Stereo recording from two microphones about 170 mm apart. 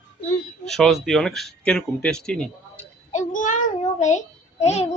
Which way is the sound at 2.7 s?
40° left (ahead or behind).